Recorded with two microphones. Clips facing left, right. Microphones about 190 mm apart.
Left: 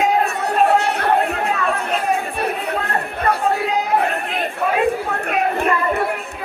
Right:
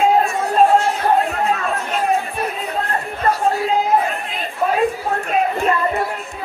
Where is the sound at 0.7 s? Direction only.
65° left (ahead or behind).